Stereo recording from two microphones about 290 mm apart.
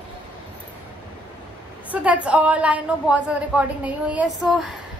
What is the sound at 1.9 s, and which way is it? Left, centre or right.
A woman's voice, centre.